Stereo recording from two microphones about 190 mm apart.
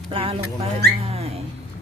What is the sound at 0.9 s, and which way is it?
Dog, 35° right (ahead or behind).